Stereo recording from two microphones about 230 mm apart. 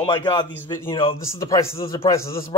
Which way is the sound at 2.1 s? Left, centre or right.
Centre.